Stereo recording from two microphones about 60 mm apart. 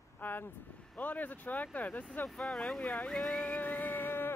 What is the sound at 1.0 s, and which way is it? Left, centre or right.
Speech, left.